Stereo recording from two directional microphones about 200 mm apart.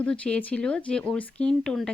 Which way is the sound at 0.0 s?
5° left (ahead or behind).